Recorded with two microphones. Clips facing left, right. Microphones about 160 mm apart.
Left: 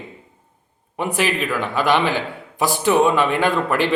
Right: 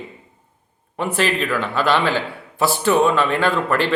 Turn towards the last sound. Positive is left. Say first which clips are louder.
# even
turn(degrees=15)  # may be behind; listen again after turning